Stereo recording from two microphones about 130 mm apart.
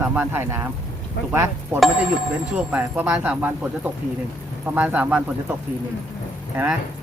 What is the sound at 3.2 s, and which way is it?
Speech, 10° right (ahead or behind).